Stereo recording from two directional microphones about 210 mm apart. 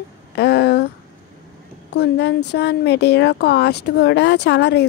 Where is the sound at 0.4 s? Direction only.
50° left (ahead or behind).